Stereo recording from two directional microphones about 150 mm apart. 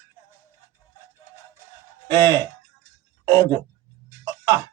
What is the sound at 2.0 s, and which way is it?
Speech, 25° right (ahead or behind).